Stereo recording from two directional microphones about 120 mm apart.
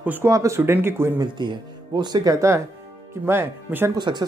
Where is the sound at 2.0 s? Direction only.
35° right (ahead or behind).